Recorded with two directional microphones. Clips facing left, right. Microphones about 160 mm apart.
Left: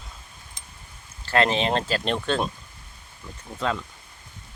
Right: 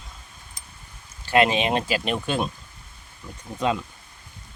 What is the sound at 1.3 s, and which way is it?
Speech, 15° right (ahead or behind).